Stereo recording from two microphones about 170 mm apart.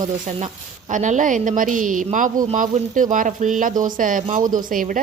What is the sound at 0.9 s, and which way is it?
A woman's voice, 45° right (ahead or behind).